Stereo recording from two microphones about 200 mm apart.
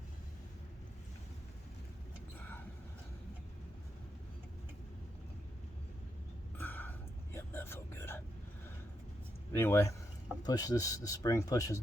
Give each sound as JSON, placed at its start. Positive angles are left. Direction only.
{"t": 6.6, "sound": "a sound", "side_deg": 10}
{"t": 7.3, "sound": "whispering", "side_deg": 10}
{"t": 9.5, "sound": "speech", "side_deg": 10}